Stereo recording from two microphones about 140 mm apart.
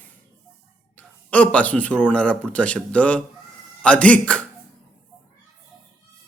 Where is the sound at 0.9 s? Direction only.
10° left (ahead or behind).